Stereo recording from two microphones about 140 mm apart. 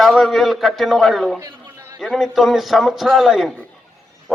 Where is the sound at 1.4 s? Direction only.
25° right (ahead or behind).